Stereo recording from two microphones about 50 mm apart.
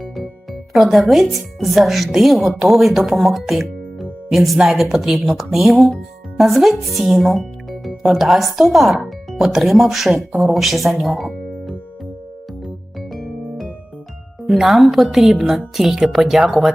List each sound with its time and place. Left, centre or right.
0.7 s speech: centre
14.5 s speech: centre